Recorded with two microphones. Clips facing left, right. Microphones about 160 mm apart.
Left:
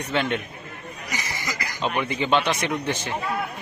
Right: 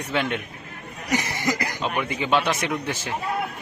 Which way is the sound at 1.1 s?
60° right (ahead or behind).